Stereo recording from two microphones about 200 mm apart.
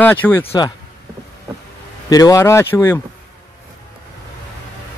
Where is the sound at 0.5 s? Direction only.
20° left (ahead or behind).